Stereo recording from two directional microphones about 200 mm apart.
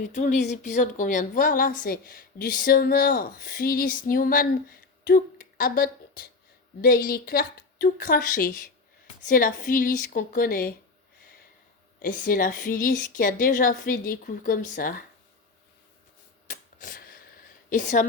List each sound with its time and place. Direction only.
0.1 s a woman's voice: 40° left (ahead or behind)
12.0 s a woman's voice: 45° left (ahead or behind)
16.5 s a sound: 40° left (ahead or behind)
17.7 s a woman's voice: 40° left (ahead or behind)